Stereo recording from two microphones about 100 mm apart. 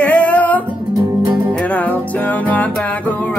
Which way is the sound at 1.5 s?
15° left (ahead or behind).